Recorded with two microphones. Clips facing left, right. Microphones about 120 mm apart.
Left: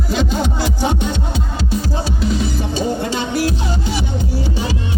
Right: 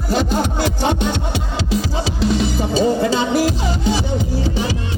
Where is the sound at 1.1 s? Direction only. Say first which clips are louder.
Right 1 dB; 85° right.